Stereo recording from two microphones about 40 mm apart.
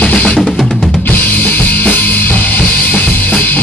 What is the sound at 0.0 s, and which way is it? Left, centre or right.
Music, left.